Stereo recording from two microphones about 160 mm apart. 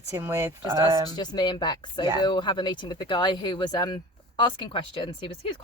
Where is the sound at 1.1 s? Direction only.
25° left (ahead or behind).